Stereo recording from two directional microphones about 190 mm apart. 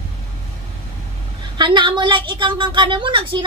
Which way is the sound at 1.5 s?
25° right (ahead or behind).